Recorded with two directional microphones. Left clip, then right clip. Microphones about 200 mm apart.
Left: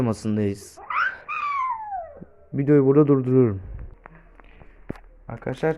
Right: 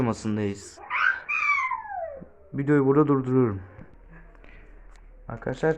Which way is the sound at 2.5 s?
25° left (ahead or behind).